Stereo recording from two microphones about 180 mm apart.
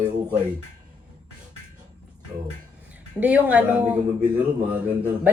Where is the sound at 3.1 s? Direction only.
10° right (ahead or behind).